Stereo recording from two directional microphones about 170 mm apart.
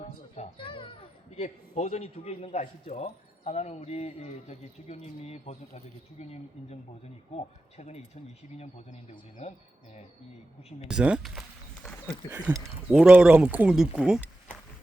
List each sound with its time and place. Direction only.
0.3 s a child's voice: 30° left (ahead or behind)
7.3 s a child's voice: 40° left (ahead or behind)
10.8 s a sound: 5° right (ahead or behind)
12.3 s speech: 10° right (ahead or behind)